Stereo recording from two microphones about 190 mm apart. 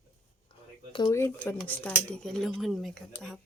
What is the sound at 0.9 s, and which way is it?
Speech, 20° left (ahead or behind).